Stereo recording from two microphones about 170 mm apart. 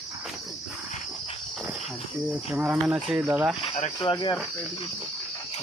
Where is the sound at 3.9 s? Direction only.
25° left (ahead or behind).